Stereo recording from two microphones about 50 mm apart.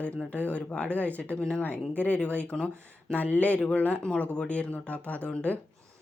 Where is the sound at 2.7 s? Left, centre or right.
Right.